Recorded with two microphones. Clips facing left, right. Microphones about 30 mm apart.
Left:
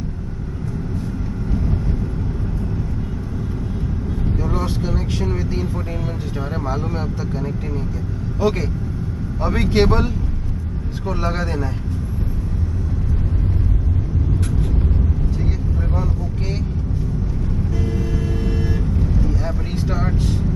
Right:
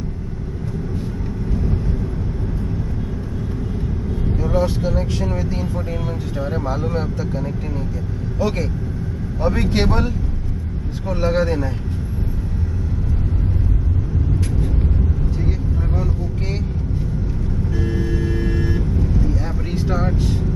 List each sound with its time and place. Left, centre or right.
4.6 s speech: centre
6.7 s speech: centre
17.8 s vehicle: right
18.4 s vehicle: centre
19.2 s vehicle: centre